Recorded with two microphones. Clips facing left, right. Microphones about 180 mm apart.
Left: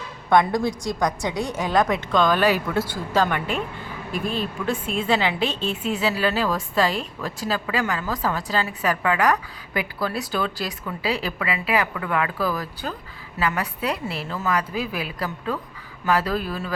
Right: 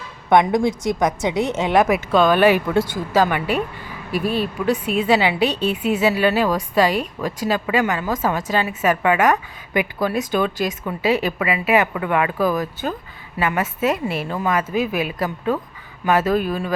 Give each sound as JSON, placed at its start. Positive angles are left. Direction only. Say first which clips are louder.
{"t": 0.3, "sound": "speech", "louder": "right 3 dB", "side_deg": -20}
{"t": 1.8, "sound": "a woman's voice", "louder": "right 4 dB", "side_deg": -10}
{"t": 2.2, "sound": "speech", "louder": "right 6 dB", "side_deg": -20}
{"t": 3.1, "sound": "a woman's voice", "louder": "right 3 dB", "side_deg": -10}